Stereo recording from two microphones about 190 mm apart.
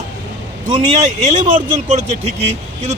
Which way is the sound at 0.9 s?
40° right (ahead or behind).